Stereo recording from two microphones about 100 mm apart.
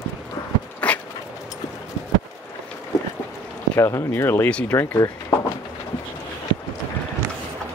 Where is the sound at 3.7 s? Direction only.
25° left (ahead or behind).